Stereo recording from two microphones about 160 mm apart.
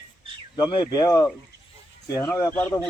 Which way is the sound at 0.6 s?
30° left (ahead or behind).